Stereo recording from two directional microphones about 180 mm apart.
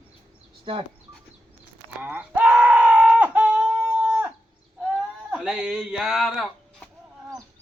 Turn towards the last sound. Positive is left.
turn(degrees=0)  # may be behind; listen again after turning